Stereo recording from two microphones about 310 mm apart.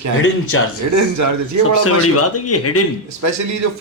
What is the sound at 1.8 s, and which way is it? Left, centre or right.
Speech, left.